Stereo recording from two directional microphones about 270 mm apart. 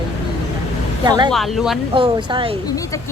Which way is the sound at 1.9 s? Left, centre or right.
Centre.